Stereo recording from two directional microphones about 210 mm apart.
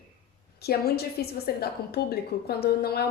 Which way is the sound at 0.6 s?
50° left (ahead or behind).